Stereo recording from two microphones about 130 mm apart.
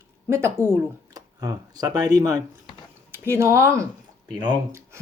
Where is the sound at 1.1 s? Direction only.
30° right (ahead or behind).